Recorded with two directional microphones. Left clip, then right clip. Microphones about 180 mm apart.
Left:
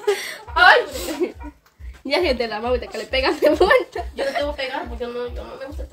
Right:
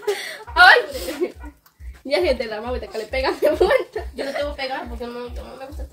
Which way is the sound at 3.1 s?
55° left (ahead or behind).